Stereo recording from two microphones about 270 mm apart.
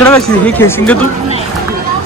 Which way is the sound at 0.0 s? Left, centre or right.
Centre.